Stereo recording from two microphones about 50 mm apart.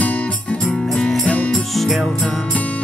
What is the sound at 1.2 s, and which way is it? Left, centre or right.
Music, left.